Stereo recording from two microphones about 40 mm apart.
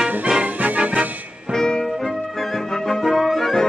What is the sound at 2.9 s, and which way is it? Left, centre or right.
Music, centre.